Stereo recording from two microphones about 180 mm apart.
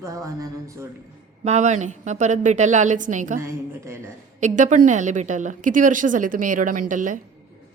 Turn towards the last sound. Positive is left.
turn(degrees=-45)  # may be behind; listen again after turning